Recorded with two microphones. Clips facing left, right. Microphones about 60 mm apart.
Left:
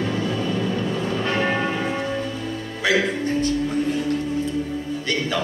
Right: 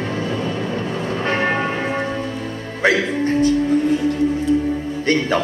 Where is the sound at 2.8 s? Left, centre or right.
Right.